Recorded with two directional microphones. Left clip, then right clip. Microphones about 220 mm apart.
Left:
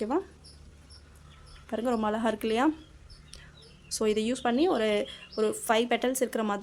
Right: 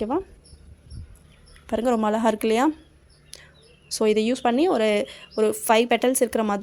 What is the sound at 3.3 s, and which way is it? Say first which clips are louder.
Bird: right 6 dB; 25° right (ahead or behind).